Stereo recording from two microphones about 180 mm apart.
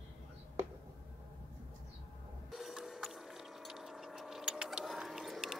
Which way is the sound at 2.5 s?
Centre (ahead or behind).